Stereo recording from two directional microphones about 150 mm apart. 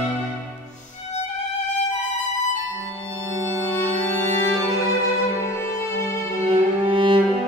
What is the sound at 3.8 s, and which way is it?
Music, 15° left (ahead or behind).